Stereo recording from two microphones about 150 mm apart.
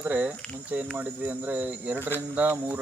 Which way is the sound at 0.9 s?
10° right (ahead or behind).